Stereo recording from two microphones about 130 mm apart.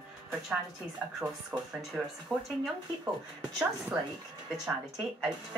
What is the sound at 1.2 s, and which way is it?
A woman's voice, 15° right (ahead or behind).